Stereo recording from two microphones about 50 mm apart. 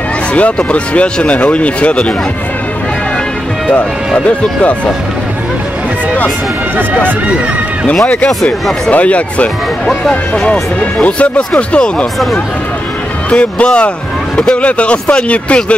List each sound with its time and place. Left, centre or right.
0.3 s speech: left
4.3 s speech: left
7.8 s speech: centre
8.9 s speech: left
13.3 s speech: left